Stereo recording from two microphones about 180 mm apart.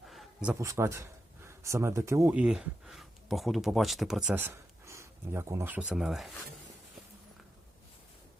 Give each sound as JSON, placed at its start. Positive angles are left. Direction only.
{"t": 0.1, "sound": "a sound", "side_deg": 0}
{"t": 0.6, "sound": "speech", "side_deg": -15}
{"t": 2.4, "sound": "speech", "side_deg": -5}